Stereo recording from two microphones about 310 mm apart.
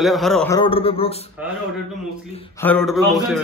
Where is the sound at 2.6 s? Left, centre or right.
Centre.